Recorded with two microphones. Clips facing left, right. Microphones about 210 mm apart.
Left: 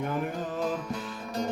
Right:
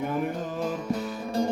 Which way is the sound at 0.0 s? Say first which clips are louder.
Right 2 dB; centre (ahead or behind).